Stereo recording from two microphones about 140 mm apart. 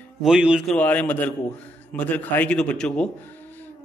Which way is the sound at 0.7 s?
10° left (ahead or behind).